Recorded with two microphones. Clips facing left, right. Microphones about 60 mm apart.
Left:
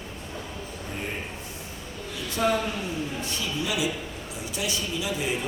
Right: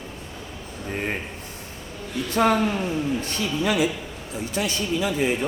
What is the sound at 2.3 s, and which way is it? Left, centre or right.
A man's voice, right.